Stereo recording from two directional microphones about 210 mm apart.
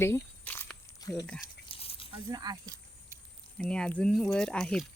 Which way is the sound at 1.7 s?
25° left (ahead or behind).